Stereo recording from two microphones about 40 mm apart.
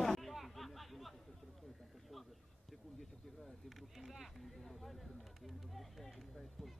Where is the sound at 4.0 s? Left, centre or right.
Centre.